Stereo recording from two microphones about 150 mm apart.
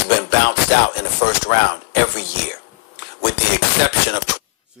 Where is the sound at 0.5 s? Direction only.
90° left.